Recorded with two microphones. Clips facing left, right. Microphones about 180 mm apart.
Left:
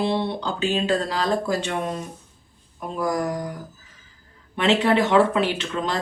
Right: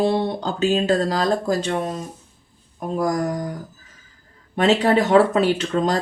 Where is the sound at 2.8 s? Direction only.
45° right (ahead or behind).